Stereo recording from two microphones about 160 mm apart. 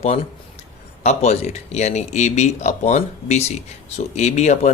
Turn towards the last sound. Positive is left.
turn(degrees=45)  # may be behind; listen again after turning